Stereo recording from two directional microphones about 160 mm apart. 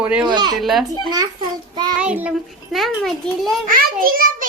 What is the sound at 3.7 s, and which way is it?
Speech, 65° right (ahead or behind).